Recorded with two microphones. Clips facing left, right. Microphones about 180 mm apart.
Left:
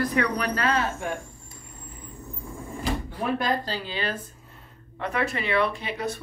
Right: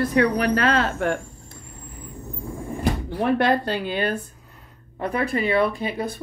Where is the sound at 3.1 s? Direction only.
70° right (ahead or behind); by 4.2 s 55° right (ahead or behind).